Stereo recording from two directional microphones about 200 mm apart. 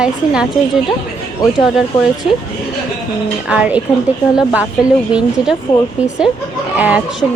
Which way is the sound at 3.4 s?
5° right (ahead or behind).